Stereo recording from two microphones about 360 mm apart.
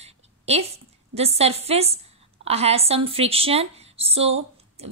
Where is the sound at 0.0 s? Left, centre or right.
Centre.